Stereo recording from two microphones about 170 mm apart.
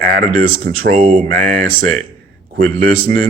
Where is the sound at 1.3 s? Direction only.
55° right (ahead or behind).